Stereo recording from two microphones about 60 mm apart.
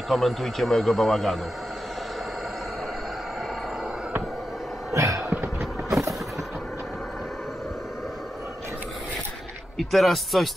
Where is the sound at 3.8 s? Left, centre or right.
Centre.